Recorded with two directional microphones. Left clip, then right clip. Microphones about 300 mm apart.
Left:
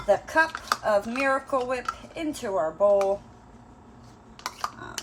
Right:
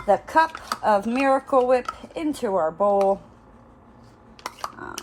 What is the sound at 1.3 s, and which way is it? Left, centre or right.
Speech, right.